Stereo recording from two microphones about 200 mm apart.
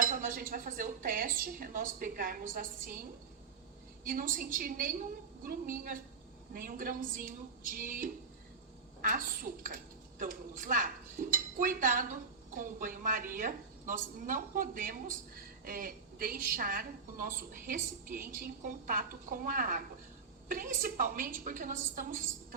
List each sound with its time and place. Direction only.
0.0 s a woman's voice: 45° right (ahead or behind)